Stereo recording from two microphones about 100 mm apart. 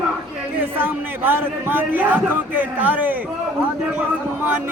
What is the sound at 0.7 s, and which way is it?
A man's voice, 20° right (ahead or behind).